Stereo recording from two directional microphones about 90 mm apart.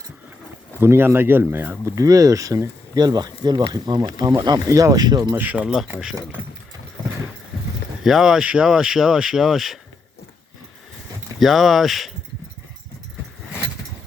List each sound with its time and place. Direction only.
0.8 s speech: 25° right (ahead or behind)
2.0 s speech: 40° right (ahead or behind)
5.3 s speech: 20° right (ahead or behind)
8.0 s speech: 5° right (ahead or behind)
11.3 s speech: centre (ahead or behind)